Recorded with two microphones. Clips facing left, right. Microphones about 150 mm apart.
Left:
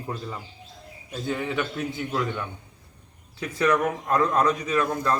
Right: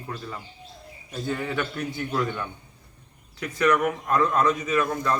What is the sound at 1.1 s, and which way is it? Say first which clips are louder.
A man's voice: even; 10° left (ahead or behind).